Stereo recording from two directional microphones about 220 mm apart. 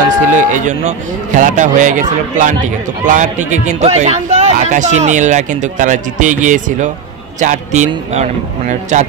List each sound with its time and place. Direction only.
0.4 s a man's voice: 35° right (ahead or behind)